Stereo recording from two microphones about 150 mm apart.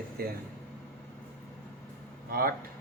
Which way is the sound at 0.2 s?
90° right.